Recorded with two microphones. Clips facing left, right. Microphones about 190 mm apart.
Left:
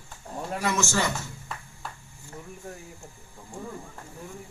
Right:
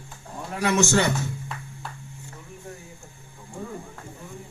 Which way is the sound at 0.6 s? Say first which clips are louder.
Right 6 dB; 65° right (ahead or behind).